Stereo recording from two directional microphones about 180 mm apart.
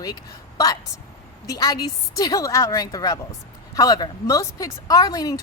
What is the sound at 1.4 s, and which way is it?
Speech, 20° left (ahead or behind).